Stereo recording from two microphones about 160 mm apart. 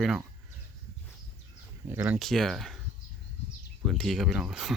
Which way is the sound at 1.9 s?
10° right (ahead or behind).